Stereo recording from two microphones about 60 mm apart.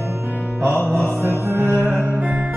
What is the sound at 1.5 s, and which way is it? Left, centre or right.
Music, right.